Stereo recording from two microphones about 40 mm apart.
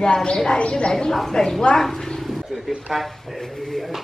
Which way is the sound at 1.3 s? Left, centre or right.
Centre.